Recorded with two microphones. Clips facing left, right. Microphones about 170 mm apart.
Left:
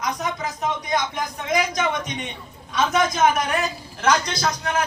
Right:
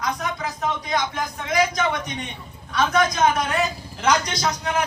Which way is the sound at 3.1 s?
Centre (ahead or behind).